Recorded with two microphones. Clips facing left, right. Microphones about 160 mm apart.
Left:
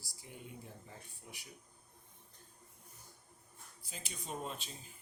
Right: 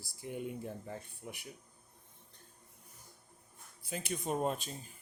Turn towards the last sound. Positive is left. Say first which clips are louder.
# right 9 dB
turn(degrees=-50)  # may be behind; listen again after turning